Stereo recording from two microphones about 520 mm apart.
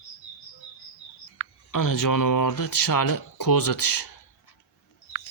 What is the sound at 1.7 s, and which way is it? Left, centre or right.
Speech, left.